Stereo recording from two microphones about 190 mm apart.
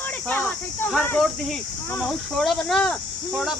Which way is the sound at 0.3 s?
10° left (ahead or behind).